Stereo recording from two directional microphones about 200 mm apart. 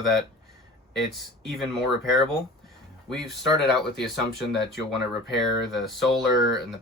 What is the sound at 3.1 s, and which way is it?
Speech, centre (ahead or behind).